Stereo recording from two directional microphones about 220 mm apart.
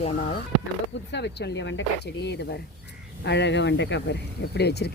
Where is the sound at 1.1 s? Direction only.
50° left (ahead or behind).